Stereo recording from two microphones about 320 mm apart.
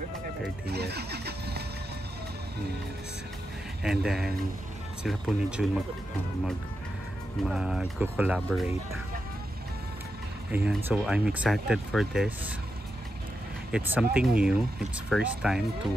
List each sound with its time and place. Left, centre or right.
0.7 s vehicle: right
3.8 s speech: centre
7.4 s speech: centre
10.5 s speech: centre
13.7 s speech: centre